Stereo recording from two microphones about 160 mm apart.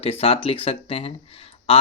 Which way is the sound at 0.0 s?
35° left (ahead or behind).